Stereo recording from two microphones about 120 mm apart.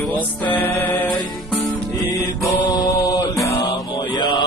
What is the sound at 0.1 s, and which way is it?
Music, 15° left (ahead or behind).